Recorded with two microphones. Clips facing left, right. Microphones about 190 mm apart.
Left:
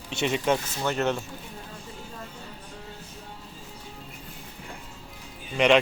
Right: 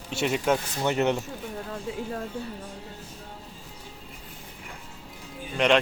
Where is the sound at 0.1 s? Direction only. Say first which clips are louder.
Even; 5° right (ahead or behind).